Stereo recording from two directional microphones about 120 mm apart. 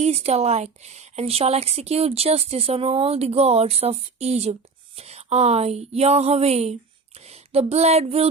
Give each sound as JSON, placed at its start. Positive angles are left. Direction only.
{"t": 0.0, "sound": "a woman's voice", "side_deg": -60}